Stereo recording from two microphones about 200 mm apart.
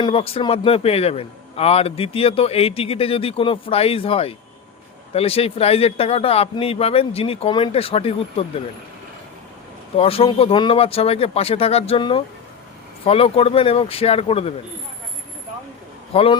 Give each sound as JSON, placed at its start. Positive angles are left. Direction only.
{"t": 0.0, "sound": "a man's voice", "side_deg": 30}
{"t": 10.0, "sound": "a man's voice", "side_deg": 30}
{"t": 16.1, "sound": "a man's voice", "side_deg": 30}